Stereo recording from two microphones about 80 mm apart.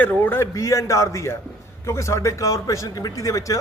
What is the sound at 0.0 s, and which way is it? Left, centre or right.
Speech, left.